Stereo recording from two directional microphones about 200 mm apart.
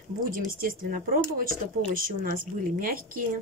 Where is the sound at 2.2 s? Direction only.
45° right (ahead or behind).